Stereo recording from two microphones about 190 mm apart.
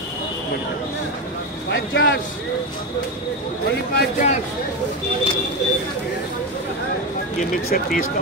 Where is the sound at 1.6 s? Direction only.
80° left.